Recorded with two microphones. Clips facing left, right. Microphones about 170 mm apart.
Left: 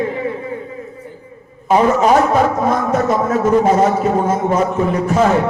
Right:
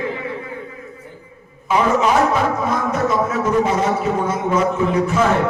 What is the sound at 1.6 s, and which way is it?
Speech, 40° left (ahead or behind).